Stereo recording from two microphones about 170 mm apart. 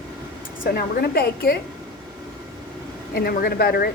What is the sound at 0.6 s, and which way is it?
Speech, 60° left (ahead or behind).